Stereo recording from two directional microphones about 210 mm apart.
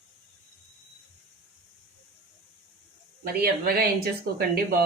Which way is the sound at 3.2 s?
45° right (ahead or behind).